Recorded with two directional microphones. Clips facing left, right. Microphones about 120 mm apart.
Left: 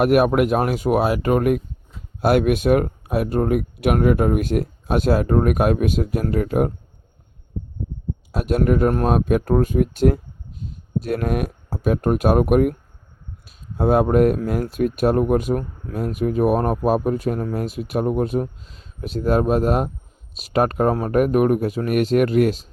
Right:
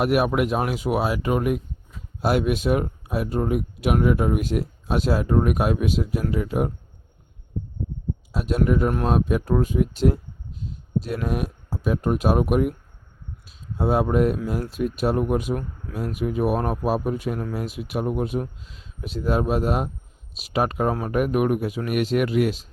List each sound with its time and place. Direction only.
0.0 s speech: 50° left (ahead or behind)
8.3 s speech: 55° left (ahead or behind)
13.7 s speech: 55° left (ahead or behind)